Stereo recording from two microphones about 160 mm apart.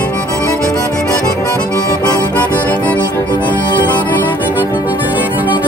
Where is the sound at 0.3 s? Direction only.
20° left (ahead or behind).